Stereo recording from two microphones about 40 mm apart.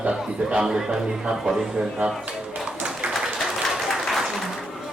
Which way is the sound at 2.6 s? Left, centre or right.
Right.